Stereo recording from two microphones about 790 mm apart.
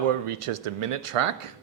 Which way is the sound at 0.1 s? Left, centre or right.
Right.